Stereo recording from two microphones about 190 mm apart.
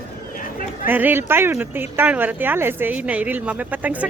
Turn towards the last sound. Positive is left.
turn(degrees=-10)  # may be behind; listen again after turning